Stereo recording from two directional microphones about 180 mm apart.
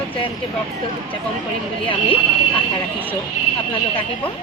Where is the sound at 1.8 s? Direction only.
30° left (ahead or behind).